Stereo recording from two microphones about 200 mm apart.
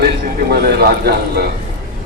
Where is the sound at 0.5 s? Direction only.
50° right (ahead or behind).